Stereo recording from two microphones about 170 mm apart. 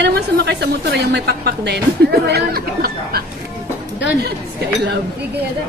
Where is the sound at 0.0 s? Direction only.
80° right; by 3.3 s 65° right (ahead or behind).